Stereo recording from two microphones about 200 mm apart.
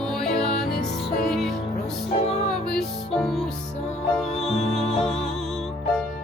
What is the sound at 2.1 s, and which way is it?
Music, 30° left (ahead or behind).